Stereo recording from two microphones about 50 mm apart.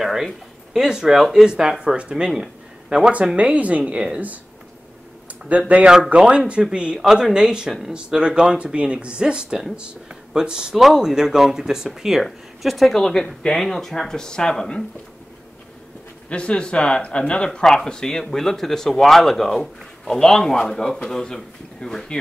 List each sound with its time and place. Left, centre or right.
0.0 s a sound: centre
0.7 s speech: centre
3.3 s speech: right
5.5 s speech: right
7.0 s speech: centre
12.2 s speech: centre
12.9 s speech: centre
16.3 s speech: left